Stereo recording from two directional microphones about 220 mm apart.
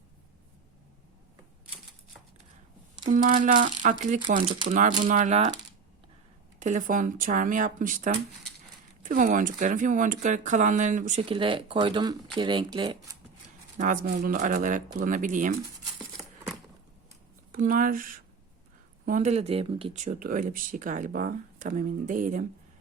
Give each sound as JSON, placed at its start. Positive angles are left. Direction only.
{"t": 3.1, "sound": "speech", "side_deg": -35}
{"t": 6.6, "sound": "speech", "side_deg": -35}
{"t": 13.7, "sound": "speech", "side_deg": -35}
{"t": 16.0, "sound": "a sound", "side_deg": -5}
{"t": 17.5, "sound": "speech", "side_deg": -40}